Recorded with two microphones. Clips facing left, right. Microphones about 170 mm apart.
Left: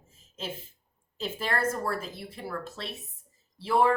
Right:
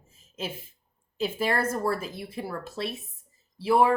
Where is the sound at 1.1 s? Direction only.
10° right (ahead or behind).